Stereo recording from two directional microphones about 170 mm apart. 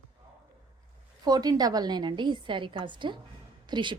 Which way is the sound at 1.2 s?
25° right (ahead or behind).